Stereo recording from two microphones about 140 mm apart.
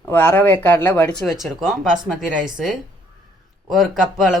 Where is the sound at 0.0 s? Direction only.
10° left (ahead or behind).